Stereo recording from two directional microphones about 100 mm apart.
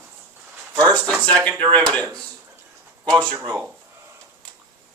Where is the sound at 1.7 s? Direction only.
10° left (ahead or behind).